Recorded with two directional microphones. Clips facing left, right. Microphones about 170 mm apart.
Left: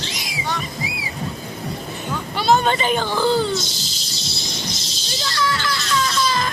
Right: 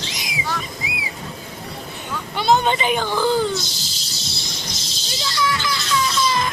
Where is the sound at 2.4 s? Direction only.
20° right (ahead or behind).